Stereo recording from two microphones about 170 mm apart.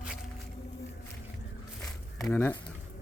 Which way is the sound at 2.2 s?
10° left (ahead or behind).